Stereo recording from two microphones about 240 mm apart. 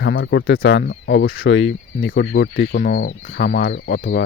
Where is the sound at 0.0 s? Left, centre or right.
Left.